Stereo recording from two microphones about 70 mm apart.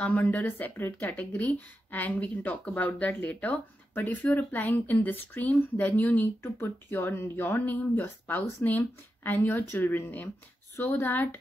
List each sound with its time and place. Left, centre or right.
0.0 s speech: left